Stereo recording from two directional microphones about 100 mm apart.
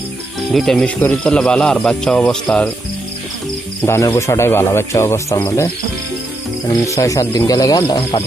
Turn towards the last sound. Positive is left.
turn(degrees=40)  # may be behind; listen again after turning